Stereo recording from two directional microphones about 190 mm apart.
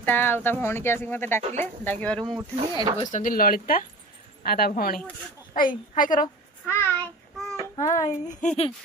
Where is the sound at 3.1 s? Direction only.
45° left (ahead or behind).